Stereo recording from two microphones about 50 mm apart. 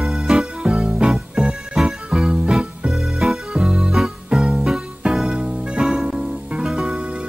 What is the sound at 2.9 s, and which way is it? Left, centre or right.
Music, centre.